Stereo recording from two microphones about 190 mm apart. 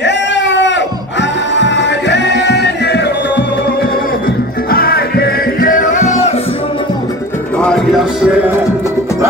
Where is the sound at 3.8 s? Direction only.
50° left (ahead or behind).